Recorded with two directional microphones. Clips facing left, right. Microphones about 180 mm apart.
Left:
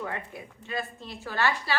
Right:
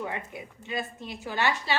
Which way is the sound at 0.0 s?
20° right (ahead or behind).